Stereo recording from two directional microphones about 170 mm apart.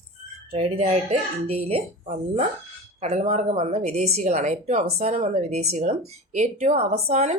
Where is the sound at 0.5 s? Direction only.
35° right (ahead or behind).